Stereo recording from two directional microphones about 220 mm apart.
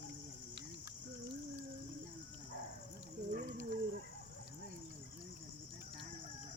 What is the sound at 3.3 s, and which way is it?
Dog, 40° right (ahead or behind).